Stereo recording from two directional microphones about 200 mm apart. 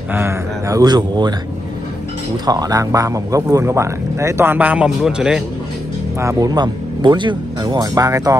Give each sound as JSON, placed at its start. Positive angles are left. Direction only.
{"t": 0.1, "sound": "speech", "side_deg": -15}
{"t": 2.4, "sound": "speech", "side_deg": -20}
{"t": 6.1, "sound": "speech", "side_deg": -15}